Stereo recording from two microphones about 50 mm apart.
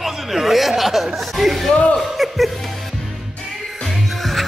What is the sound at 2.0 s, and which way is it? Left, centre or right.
Music, centre.